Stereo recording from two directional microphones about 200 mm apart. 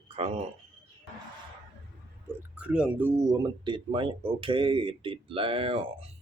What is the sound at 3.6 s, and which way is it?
Speech, 25° right (ahead or behind).